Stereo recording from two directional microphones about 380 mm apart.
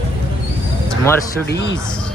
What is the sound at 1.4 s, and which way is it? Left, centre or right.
Speech, left.